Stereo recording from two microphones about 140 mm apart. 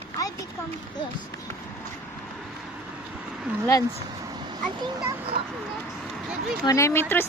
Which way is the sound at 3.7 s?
25° left (ahead or behind).